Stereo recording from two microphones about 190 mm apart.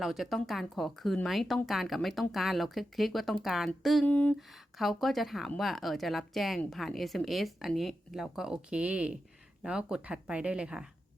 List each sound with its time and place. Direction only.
0.0 s speech: centre (ahead or behind)